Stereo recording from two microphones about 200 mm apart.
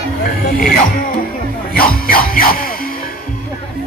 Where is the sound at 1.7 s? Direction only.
45° left (ahead or behind).